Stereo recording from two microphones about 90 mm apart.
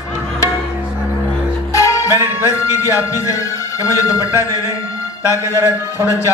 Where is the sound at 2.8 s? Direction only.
35° left (ahead or behind).